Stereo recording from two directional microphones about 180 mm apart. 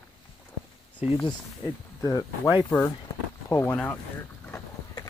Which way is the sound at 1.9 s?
20° left (ahead or behind).